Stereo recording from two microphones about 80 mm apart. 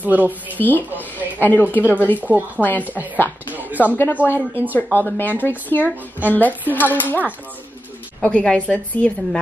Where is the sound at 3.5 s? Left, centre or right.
Right.